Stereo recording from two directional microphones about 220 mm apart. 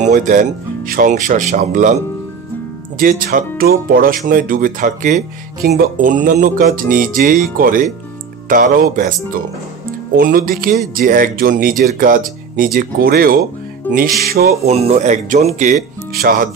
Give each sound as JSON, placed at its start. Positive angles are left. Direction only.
{"t": 0.0, "sound": "speech", "side_deg": -35}
{"t": 3.0, "sound": "speech", "side_deg": -40}
{"t": 13.9, "sound": "music", "side_deg": 10}
{"t": 14.2, "sound": "speech", "side_deg": -45}
{"t": 14.7, "sound": "speech", "side_deg": -30}